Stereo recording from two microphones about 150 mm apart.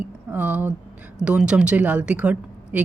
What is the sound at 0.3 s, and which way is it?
Speech, 10° right (ahead or behind).